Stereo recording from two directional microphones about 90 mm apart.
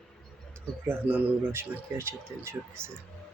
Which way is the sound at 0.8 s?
20° right (ahead or behind).